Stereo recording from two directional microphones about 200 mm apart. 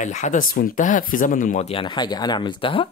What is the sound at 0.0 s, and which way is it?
Speech, 40° left (ahead or behind).